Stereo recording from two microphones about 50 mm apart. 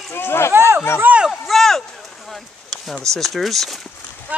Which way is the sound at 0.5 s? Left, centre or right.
Right.